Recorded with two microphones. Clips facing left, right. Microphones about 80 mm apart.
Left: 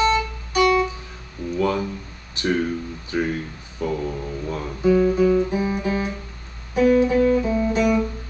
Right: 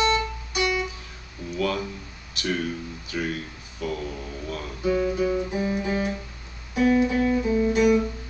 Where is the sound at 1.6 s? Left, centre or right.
Left.